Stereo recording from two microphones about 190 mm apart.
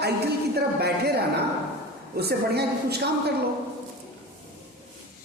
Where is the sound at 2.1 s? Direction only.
55° right (ahead or behind).